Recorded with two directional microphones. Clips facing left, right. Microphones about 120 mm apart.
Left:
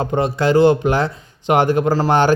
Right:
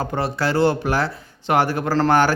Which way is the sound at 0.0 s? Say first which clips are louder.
Left 5 dB; 20° left (ahead or behind).